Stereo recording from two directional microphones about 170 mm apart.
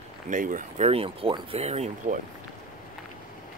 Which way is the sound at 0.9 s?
35° right (ahead or behind).